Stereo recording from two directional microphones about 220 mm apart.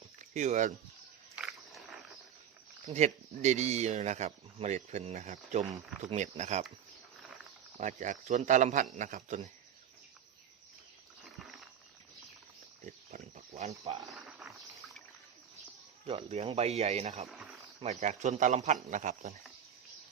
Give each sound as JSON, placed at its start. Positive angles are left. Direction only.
{"t": 0.2, "sound": "speech", "side_deg": -35}
{"t": 1.4, "sound": "wild animals", "side_deg": 0}
{"t": 2.8, "sound": "speech", "side_deg": -30}
{"t": 7.8, "sound": "speech", "side_deg": -35}
{"t": 12.8, "sound": "pig", "side_deg": -35}
{"t": 14.1, "sound": "a sound", "side_deg": 0}
{"t": 16.0, "sound": "speech", "side_deg": -25}
{"t": 17.2, "sound": "a sound", "side_deg": 0}
{"t": 17.8, "sound": "speech", "side_deg": -35}